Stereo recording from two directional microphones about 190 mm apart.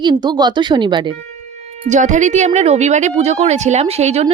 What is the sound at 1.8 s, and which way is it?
Speech, 40° right (ahead or behind).